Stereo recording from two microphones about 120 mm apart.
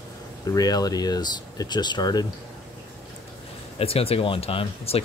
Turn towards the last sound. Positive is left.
turn(degrees=50)  # may be behind; listen again after turning